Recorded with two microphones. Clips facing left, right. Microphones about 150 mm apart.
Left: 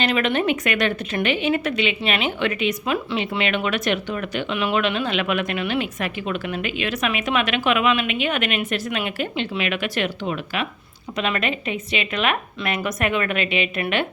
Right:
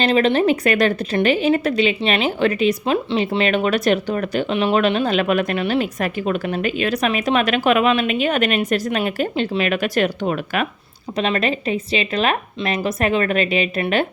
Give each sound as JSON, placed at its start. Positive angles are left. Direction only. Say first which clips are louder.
{"t": 0.0, "sound": "a woman's voice", "louder": "right 5 dB", "side_deg": -30}
{"t": 11.2, "sound": "a woman's voice", "louder": "right 4 dB", "side_deg": -35}